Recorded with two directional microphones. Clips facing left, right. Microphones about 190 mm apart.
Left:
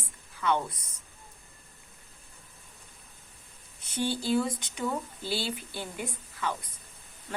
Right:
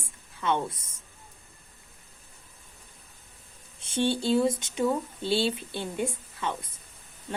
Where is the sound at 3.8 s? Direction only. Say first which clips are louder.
Right 4 dB; 25° right (ahead or behind).